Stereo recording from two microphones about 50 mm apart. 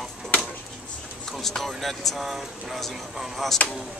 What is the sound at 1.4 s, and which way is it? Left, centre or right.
Speech, centre.